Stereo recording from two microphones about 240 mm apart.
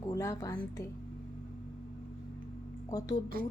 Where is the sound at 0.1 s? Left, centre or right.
Centre.